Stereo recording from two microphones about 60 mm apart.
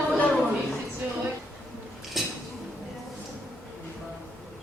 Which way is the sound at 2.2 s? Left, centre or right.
Centre.